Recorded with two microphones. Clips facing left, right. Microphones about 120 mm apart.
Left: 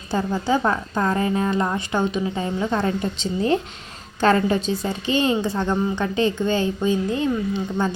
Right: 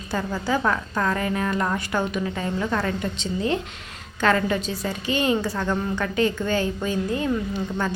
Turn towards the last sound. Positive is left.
turn(degrees=25)  # may be behind; listen again after turning